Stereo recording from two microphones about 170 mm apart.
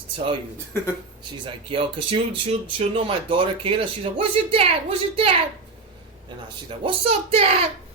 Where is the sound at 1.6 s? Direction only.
30° right (ahead or behind).